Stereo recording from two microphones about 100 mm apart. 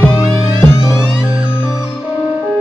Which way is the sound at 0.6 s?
25° left (ahead or behind).